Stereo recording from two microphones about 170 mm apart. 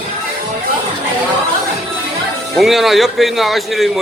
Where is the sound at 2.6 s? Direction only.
Centre (ahead or behind).